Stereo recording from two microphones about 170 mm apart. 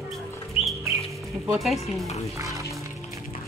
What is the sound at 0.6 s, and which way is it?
Bird, 35° left (ahead or behind).